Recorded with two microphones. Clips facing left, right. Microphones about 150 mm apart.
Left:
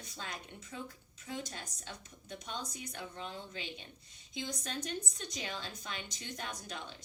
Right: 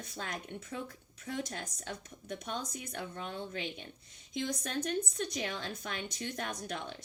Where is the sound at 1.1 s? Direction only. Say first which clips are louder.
Right 3 dB; 55° right (ahead or behind).